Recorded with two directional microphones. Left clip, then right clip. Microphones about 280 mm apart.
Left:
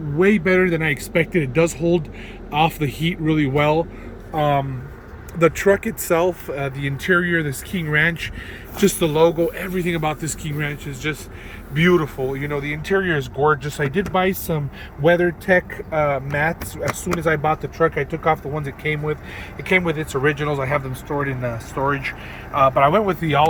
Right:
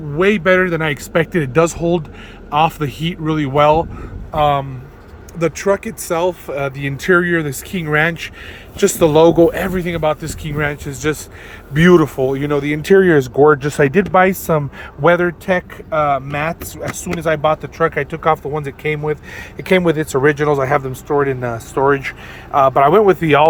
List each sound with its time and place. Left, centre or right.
0.2 s speech: centre
2.8 s speech: right
3.5 s speech: centre
4.4 s speech: centre
8.8 s speech: centre
9.8 s speech: centre